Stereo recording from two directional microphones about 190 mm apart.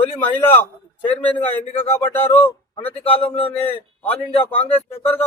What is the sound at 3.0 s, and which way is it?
Speech, 30° left (ahead or behind).